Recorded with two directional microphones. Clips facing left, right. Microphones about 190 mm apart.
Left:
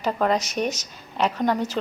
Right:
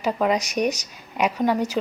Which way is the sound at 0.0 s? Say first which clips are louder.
Right 1 dB; 10° right (ahead or behind).